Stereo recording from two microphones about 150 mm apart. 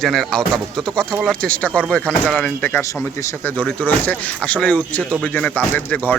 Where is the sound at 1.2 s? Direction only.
5° left (ahead or behind).